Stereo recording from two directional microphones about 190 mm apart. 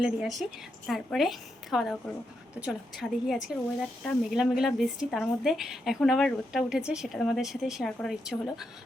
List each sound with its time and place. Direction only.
0.0 s a woman's voice: centre (ahead or behind)